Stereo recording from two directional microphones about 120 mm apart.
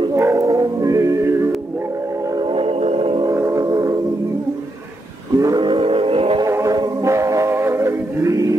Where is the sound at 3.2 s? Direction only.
25° right (ahead or behind).